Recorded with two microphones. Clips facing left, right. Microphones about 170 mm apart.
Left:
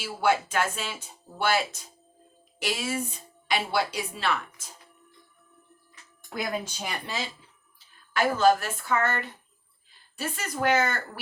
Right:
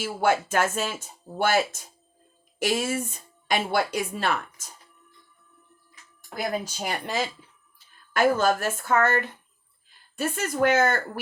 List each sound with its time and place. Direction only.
0.0 s a woman's voice: 50° right (ahead or behind)
6.3 s a woman's voice: 35° right (ahead or behind)